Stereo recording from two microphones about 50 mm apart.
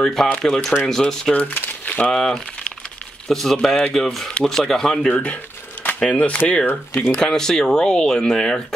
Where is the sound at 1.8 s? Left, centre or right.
Left.